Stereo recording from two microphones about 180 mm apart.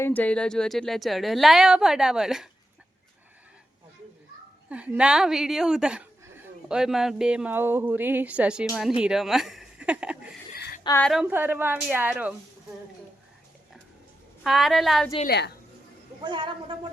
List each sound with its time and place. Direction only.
0.0 s a woman's voice: 10° left (ahead or behind)
4.7 s a woman's voice: 5° right (ahead or behind)
14.4 s a woman's voice: centre (ahead or behind)
15.3 s a woman's voice: 65° left (ahead or behind)
16.2 s speech: 25° right (ahead or behind)